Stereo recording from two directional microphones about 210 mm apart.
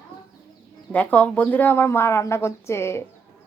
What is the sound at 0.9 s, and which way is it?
Speech, 5° left (ahead or behind).